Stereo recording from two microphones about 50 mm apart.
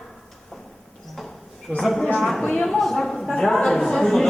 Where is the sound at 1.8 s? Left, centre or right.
Centre.